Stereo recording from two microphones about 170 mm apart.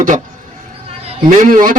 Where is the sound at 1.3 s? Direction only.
50° right (ahead or behind).